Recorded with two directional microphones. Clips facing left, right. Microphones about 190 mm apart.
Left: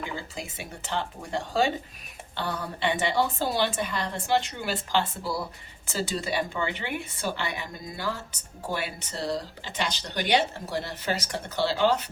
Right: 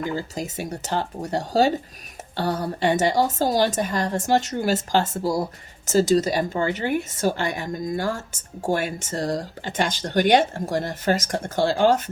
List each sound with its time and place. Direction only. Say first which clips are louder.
0.0 s a woman's voice: right 8 dB; 40° right (ahead or behind)